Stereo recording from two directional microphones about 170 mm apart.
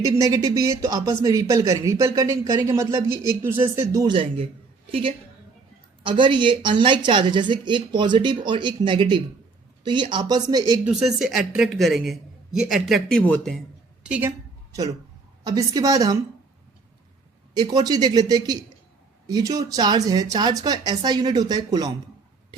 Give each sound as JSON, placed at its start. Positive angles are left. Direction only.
{"t": 0.0, "sound": "speech", "side_deg": -20}
{"t": 4.1, "sound": "a man's voice", "side_deg": -30}
{"t": 10.8, "sound": "a woman's voice", "side_deg": 0}
{"t": 14.0, "sound": "a sound", "side_deg": -10}
{"t": 15.4, "sound": "speech", "side_deg": -20}
{"t": 17.5, "sound": "speech", "side_deg": -25}